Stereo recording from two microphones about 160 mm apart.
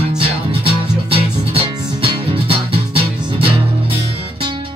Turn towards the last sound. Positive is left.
turn(degrees=-35)  # may be behind; listen again after turning